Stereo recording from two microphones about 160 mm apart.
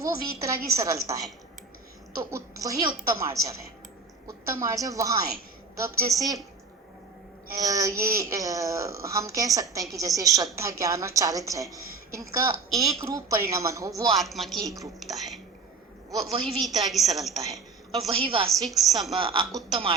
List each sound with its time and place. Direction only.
0.0 s a woman's voice: 20° right (ahead or behind)
2.3 s a woman's voice: 20° right (ahead or behind)
7.5 s a woman's voice: 20° right (ahead or behind)
14.2 s a woman's voice: centre (ahead or behind)
18.1 s speech: 35° right (ahead or behind)
18.4 s a woman's voice: centre (ahead or behind)
19.1 s speech: 30° right (ahead or behind)